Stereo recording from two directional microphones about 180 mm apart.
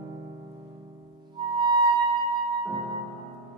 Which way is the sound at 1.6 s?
25° right (ahead or behind).